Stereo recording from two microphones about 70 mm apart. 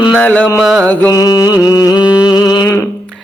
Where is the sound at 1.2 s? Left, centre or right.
Left.